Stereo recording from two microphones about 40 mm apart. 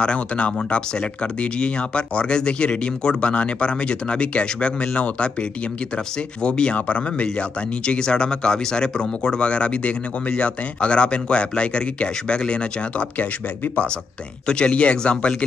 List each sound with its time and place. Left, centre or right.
0.0 s speech: left
6.4 s speech: left
14.5 s speech: left